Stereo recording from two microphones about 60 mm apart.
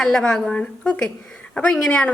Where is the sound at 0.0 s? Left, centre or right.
Centre.